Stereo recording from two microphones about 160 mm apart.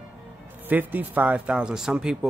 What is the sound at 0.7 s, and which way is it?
Speech, 10° right (ahead or behind).